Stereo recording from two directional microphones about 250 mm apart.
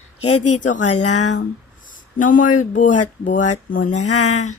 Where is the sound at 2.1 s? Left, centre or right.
Left.